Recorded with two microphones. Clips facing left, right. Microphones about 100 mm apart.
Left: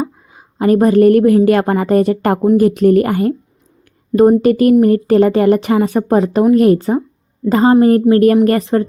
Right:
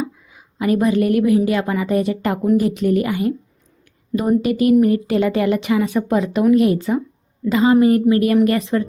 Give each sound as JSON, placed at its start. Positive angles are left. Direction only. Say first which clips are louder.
{"t": 0.0, "sound": "a woman's voice", "louder": "left 4 dB", "side_deg": 40}